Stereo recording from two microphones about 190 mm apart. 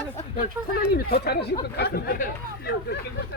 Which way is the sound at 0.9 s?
60° left (ahead or behind).